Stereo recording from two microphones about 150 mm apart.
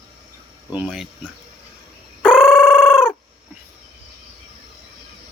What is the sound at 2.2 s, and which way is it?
Fowl, 5° right (ahead or behind).